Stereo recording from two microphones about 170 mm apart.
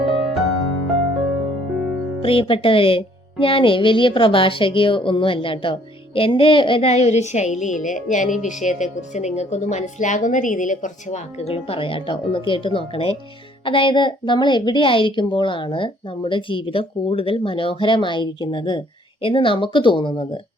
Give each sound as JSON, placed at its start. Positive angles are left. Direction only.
{"t": 0.0, "sound": "music", "side_deg": 0}
{"t": 2.2, "sound": "a woman's voice", "side_deg": 30}